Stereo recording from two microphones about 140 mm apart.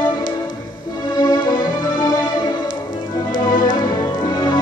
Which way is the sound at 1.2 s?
30° left (ahead or behind).